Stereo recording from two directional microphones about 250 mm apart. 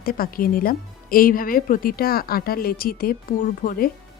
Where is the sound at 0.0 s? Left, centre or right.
Left.